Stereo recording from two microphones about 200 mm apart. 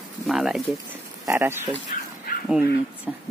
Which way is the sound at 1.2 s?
10° right (ahead or behind).